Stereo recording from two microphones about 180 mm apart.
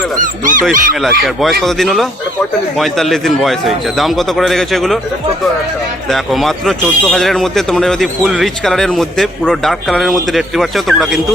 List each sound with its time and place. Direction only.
0.2 s speech: 45° right (ahead or behind)
1.2 s a man's voice: centre (ahead or behind)
6.1 s a man's voice: centre (ahead or behind)